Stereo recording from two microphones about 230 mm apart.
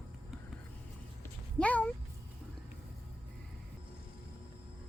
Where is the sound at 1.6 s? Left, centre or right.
Centre.